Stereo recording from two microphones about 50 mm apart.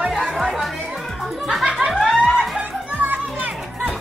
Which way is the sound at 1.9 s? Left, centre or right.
Centre.